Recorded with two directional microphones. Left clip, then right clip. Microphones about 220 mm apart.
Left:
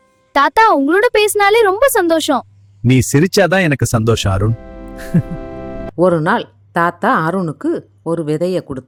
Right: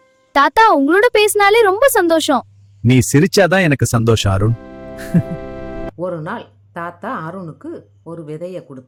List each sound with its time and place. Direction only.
0.3 s a woman's voice: centre (ahead or behind)
4.9 s music: centre (ahead or behind)
6.0 s speech: 45° left (ahead or behind)